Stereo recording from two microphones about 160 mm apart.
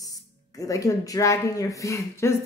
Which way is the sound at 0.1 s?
20° left (ahead or behind).